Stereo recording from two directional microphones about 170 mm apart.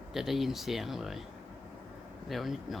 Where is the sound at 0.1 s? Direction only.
Centre (ahead or behind).